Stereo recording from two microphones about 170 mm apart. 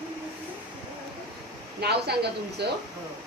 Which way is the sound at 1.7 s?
75° right (ahead or behind).